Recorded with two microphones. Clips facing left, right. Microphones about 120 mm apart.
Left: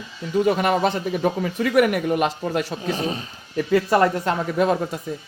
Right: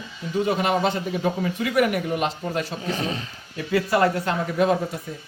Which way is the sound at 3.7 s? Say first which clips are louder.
Left 2 dB; 40° left (ahead or behind).